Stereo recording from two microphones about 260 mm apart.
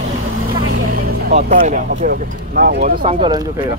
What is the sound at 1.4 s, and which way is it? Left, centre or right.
Speech, right.